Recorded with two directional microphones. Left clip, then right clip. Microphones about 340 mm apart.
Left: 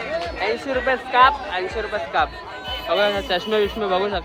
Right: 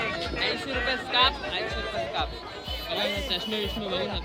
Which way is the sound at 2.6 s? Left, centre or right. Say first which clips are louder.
Left 10 dB; centre.